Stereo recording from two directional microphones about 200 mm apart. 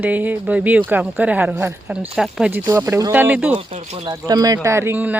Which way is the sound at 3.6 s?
30° right (ahead or behind).